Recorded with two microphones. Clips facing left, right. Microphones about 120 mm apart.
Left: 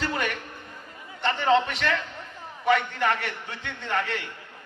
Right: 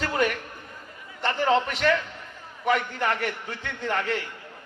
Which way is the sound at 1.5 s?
35° right (ahead or behind).